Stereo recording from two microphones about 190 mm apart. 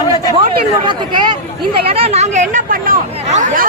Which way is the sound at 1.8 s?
30° right (ahead or behind).